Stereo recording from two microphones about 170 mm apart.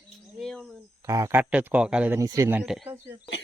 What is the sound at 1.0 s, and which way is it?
Speech, 20° right (ahead or behind).